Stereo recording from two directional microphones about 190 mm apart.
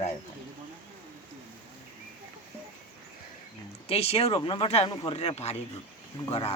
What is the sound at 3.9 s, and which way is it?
Speech, 30° left (ahead or behind).